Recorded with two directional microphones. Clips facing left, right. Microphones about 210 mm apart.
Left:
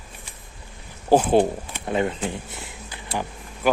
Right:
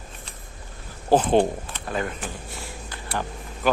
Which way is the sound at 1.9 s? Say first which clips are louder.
Left 5 dB; 20° left (ahead or behind).